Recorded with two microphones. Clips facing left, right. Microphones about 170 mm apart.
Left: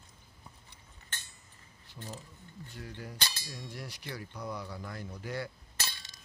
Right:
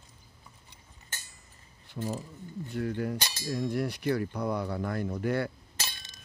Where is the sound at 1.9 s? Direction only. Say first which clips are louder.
Right 12 dB; 65° right (ahead or behind).